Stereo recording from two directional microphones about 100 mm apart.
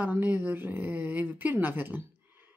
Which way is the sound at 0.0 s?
15° right (ahead or behind).